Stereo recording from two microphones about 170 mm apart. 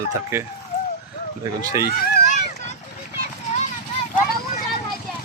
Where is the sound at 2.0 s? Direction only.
55° left (ahead or behind).